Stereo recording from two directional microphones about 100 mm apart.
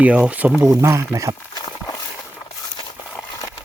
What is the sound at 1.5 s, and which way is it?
Clip-clop, 40° left (ahead or behind).